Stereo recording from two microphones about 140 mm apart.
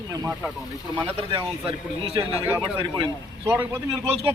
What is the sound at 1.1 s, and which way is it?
A man's voice, 45° right (ahead or behind).